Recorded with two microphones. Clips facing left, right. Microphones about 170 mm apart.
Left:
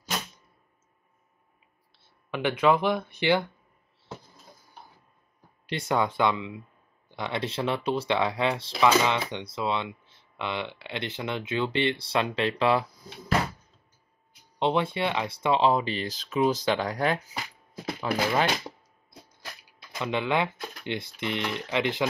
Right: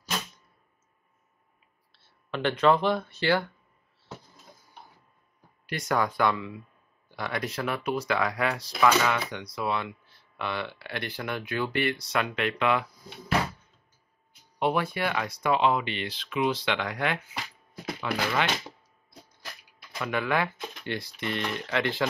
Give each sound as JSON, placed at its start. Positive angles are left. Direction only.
{"t": 1.9, "sound": "speech", "side_deg": 15}
{"t": 5.7, "sound": "speech", "side_deg": 25}
{"t": 14.6, "sound": "speech", "side_deg": 25}
{"t": 20.0, "sound": "speech", "side_deg": 25}